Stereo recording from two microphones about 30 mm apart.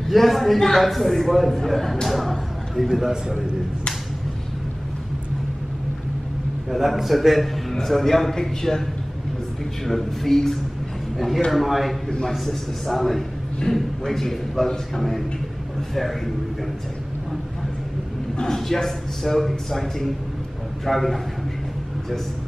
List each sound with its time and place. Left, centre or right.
0.1 s a man's voice: centre
2.0 s a sound: centre
2.9 s a man's voice: centre
6.7 s a man's voice: centre
9.8 s a man's voice: centre
18.4 s a man's voice: centre